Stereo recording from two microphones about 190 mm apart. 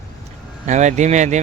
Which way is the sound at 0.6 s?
40° right (ahead or behind).